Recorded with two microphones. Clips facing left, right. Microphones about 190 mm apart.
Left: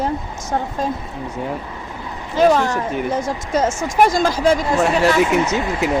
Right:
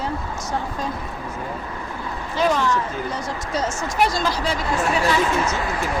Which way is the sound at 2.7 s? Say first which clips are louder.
Left 3 dB; 70° left (ahead or behind).